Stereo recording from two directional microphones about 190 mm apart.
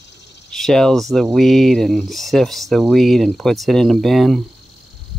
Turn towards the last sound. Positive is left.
turn(degrees=0)  # may be behind; listen again after turning